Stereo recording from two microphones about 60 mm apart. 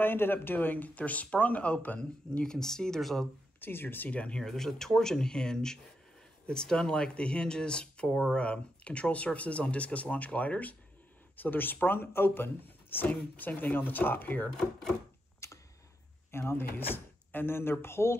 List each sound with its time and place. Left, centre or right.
0.0 s speech: left
2.3 s speech: centre
3.6 s speech: left
4.1 s speech: left
4.4 s speech: centre; by 14.5 s left
14.6 s speech: centre
15.4 s a sound: left
16.3 s speech: left